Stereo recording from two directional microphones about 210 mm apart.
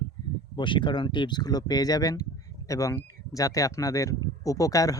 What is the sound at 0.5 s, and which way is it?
Speech, 25° left (ahead or behind).